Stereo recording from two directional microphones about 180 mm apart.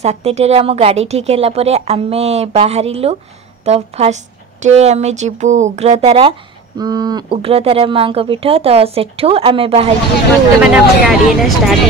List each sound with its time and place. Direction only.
0.0 s a woman's voice: 35° right (ahead or behind)
6.8 s a woman's voice: 20° right (ahead or behind)
10.6 s speech: centre (ahead or behind)